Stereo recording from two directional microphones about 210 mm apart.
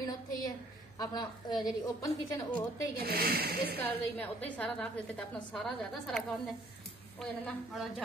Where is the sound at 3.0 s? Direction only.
45° right (ahead or behind).